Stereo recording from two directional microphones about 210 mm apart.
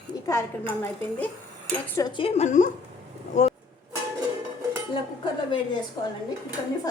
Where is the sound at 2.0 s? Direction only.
20° left (ahead or behind).